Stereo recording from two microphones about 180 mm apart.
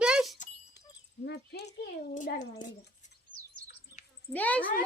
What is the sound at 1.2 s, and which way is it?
Speech, 65° left (ahead or behind).